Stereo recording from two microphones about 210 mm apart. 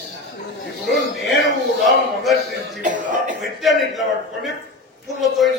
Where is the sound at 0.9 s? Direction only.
Centre (ahead or behind).